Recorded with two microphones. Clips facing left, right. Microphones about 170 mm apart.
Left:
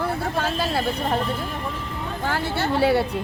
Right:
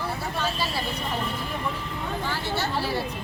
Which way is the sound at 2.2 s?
60° left (ahead or behind).